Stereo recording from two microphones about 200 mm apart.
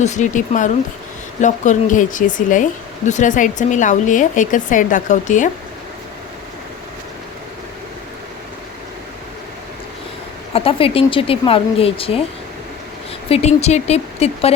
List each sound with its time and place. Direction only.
0.0 s speech: 35° left (ahead or behind)
10.5 s speech: 25° left (ahead or behind)
13.3 s speech: 35° left (ahead or behind)